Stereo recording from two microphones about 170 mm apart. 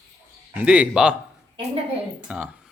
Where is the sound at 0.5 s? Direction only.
10° right (ahead or behind).